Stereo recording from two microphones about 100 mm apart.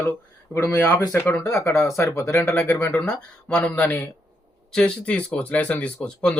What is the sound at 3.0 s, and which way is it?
A man's voice, 10° left (ahead or behind).